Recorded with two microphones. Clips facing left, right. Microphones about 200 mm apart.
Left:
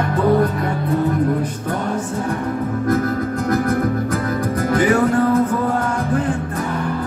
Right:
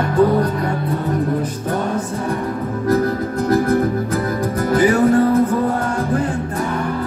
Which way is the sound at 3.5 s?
35° right (ahead or behind).